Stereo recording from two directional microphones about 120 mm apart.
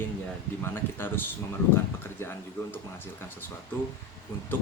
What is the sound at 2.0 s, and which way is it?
Speech, 20° left (ahead or behind).